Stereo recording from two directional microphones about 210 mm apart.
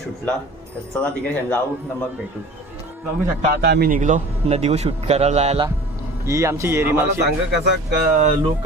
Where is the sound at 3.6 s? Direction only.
50° right (ahead or behind); by 5.7 s 25° right (ahead or behind).